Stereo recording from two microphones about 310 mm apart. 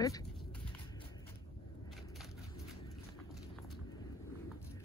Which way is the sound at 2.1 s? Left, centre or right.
Centre.